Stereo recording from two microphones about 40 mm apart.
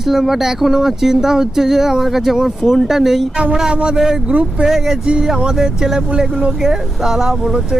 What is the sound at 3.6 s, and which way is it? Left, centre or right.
Speech, right.